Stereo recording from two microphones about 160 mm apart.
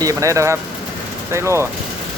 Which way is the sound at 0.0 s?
20° right (ahead or behind).